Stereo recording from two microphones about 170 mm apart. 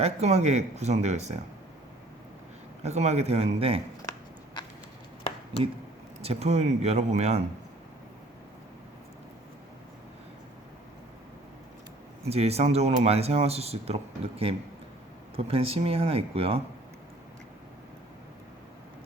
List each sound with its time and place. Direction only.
0.0 s speech: 40° right (ahead or behind)
2.8 s speech: 40° right (ahead or behind)
6.2 s speech: 40° right (ahead or behind)
12.2 s speech: 35° right (ahead or behind)